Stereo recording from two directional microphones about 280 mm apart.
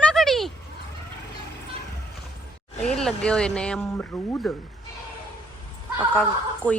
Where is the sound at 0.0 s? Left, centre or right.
Centre.